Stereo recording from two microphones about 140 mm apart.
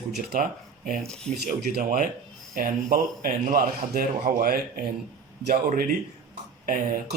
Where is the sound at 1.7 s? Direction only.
75° right (ahead or behind).